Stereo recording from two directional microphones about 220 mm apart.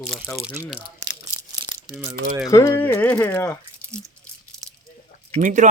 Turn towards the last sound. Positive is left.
turn(degrees=-35)  # may be behind; listen again after turning